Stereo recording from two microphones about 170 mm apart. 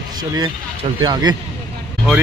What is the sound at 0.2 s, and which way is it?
A man's voice, 25° right (ahead or behind).